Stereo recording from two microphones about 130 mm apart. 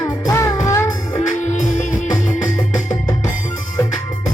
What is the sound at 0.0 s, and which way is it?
Music, 25° left (ahead or behind).